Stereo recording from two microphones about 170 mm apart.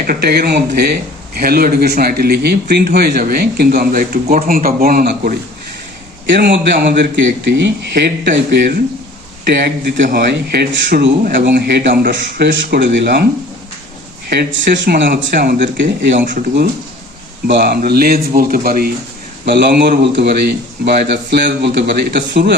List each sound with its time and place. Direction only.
0.0 s speech: 65° right (ahead or behind)
6.2 s a man's voice: 90° right
14.3 s speech: 75° right (ahead or behind)
14.8 s a man's voice: 90° right
16.1 s speech: 50° right (ahead or behind)
17.4 s speech: 70° right (ahead or behind)
19.5 s a man's voice: 90° right